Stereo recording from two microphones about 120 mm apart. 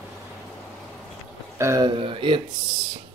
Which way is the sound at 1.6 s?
25° right (ahead or behind).